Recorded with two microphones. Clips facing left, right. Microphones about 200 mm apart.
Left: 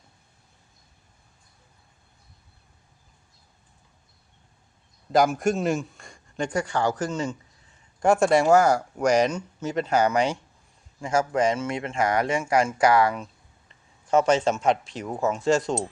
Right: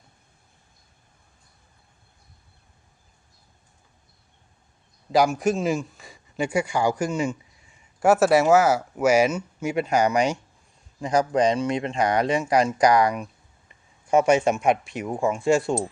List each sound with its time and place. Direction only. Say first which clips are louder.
5.1 s speech: right 1 dB; centre (ahead or behind)